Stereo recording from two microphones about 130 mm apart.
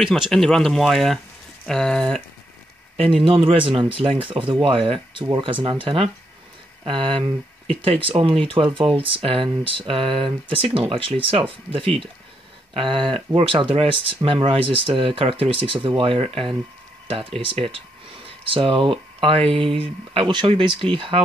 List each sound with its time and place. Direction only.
0.0 s speech: centre (ahead or behind)
3.3 s speech: 40° right (ahead or behind)